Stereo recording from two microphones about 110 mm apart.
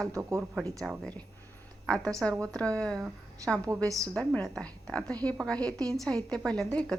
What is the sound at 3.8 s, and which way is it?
Speech, 30° right (ahead or behind).